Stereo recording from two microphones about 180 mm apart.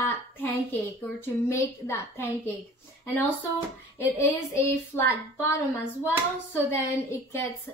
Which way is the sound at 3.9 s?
15° left (ahead or behind).